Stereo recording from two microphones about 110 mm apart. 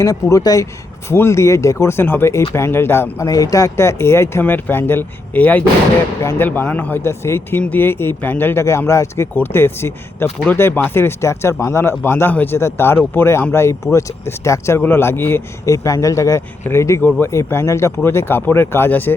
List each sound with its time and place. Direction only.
0.0 s speech: 30° left (ahead or behind)